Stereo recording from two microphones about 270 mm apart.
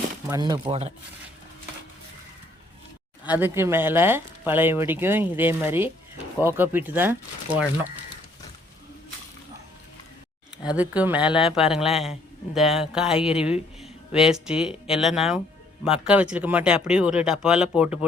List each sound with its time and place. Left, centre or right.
0.3 s speech: centre
3.2 s speech: centre
10.8 s speech: centre